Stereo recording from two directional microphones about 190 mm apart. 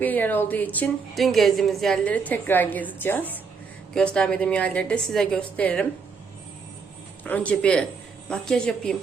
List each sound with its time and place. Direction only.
0.0 s a woman's voice: 10° left (ahead or behind)
7.3 s a woman's voice: 5° left (ahead or behind)